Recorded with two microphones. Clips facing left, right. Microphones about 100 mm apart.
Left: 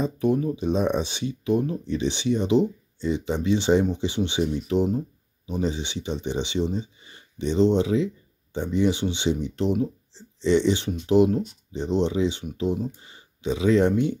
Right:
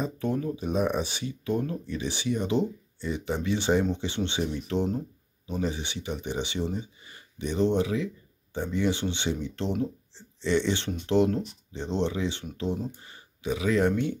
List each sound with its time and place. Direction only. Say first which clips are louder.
0.0 s speech: left 6 dB; 20° left (ahead or behind)